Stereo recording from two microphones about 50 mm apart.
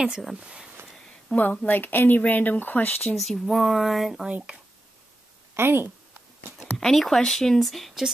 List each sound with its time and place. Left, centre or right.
0.2 s speech: centre
0.5 s speech: right
1.3 s a woman's voice: left
1.7 s speech: left
3.2 s speech: centre
4.3 s speech: right
5.5 s speech: right
6.8 s speech: centre